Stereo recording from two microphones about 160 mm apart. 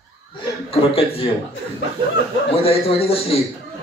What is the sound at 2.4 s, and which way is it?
Speech, 35° left (ahead or behind).